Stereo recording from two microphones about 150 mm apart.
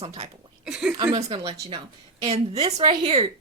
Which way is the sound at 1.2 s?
40° right (ahead or behind).